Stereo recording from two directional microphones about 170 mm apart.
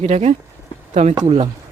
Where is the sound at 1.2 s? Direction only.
30° right (ahead or behind).